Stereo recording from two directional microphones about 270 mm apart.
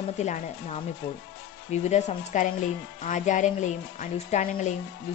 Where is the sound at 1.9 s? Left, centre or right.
Left.